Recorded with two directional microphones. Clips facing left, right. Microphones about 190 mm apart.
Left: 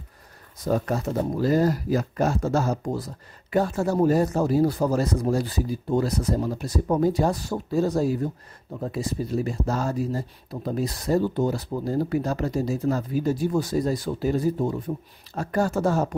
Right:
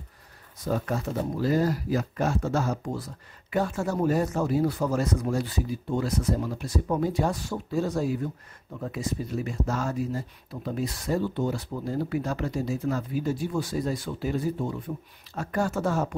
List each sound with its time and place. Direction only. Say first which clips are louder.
0.7 s speech: left 4 dB; 40° left (ahead or behind)